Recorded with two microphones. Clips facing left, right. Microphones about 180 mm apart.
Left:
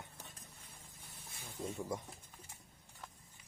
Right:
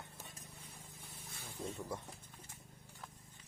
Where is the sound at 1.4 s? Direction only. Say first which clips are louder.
Left 2 dB; 10° left (ahead or behind).